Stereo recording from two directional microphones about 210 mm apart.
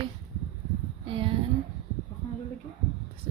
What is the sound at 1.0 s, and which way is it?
Speech, 25° right (ahead or behind).